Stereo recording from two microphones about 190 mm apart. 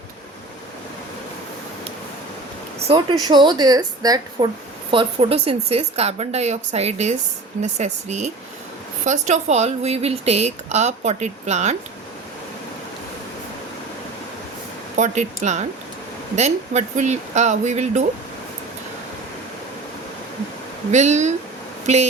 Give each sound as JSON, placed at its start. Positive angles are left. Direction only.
{"t": 2.8, "sound": "a woman's voice", "side_deg": -25}
{"t": 14.9, "sound": "speech", "side_deg": -40}
{"t": 20.9, "sound": "speech", "side_deg": -40}